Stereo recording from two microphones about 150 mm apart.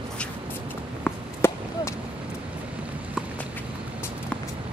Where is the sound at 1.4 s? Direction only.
15° left (ahead or behind).